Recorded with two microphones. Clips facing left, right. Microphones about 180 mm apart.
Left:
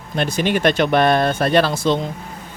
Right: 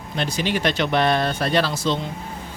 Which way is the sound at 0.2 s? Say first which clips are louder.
Left 5 dB; 55° left (ahead or behind).